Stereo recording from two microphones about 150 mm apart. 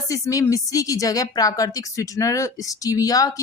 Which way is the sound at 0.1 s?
20° left (ahead or behind).